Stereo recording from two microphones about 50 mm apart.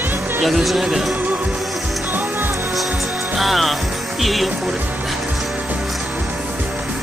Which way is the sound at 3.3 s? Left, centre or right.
Centre.